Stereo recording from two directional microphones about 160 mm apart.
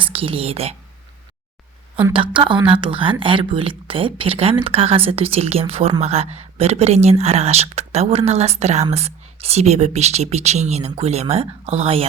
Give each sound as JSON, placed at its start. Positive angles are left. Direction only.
{"t": 0.0, "sound": "speech", "side_deg": -35}
{"t": 2.1, "sound": "speech", "side_deg": -30}